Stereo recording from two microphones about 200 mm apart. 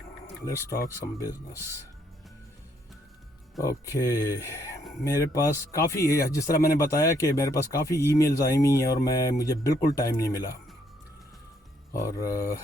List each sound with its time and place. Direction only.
0.7 s speech: 15° left (ahead or behind)
3.6 s speech: 15° left (ahead or behind)
11.9 s speech: 15° left (ahead or behind)